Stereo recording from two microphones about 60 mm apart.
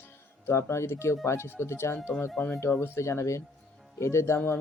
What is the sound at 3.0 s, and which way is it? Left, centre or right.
Speech, left.